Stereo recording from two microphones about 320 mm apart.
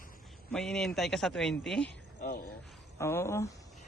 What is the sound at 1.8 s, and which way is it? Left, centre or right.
Speech, left.